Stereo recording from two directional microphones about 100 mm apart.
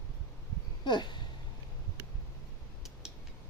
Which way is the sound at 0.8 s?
50° left (ahead or behind).